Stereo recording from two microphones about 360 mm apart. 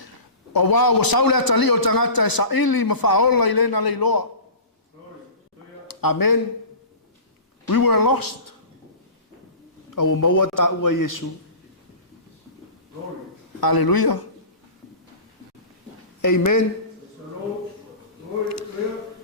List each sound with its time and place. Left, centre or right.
0.5 s a man's voice: left
5.9 s speech: left
7.7 s a man's voice: left
9.9 s a man's voice: left
13.6 s a man's voice: left
16.2 s a man's voice: left